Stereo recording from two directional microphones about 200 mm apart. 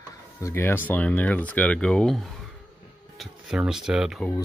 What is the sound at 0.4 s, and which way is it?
Speech, 15° left (ahead or behind).